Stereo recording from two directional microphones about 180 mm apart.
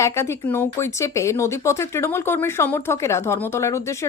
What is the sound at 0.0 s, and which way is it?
Speech, 15° left (ahead or behind).